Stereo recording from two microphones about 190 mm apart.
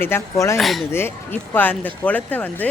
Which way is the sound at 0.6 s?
Centre (ahead or behind).